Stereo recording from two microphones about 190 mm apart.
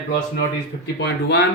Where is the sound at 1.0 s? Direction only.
65° left (ahead or behind).